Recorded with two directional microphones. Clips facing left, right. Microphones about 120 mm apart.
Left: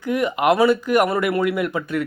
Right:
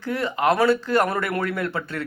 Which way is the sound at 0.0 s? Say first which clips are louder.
Left 3 dB; 15° left (ahead or behind).